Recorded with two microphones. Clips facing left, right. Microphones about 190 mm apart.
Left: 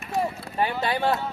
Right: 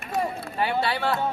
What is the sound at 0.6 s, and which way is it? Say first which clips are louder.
Speech: even; 45° left (ahead or behind).